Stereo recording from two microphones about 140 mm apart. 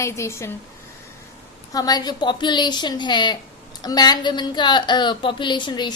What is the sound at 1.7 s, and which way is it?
A woman's voice, 30° left (ahead or behind).